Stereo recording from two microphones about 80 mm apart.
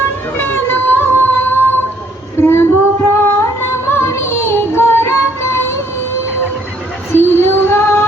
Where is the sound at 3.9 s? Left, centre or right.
Left.